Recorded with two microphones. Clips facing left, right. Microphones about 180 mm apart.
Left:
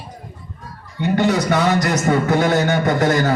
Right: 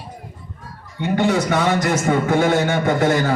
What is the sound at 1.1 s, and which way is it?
A man's voice, 40° left (ahead or behind).